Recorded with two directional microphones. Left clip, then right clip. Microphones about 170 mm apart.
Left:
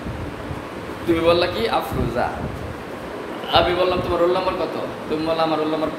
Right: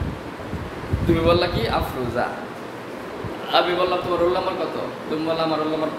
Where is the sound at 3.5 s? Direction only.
10° left (ahead or behind).